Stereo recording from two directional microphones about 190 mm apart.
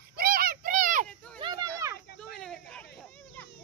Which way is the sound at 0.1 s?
50° right (ahead or behind).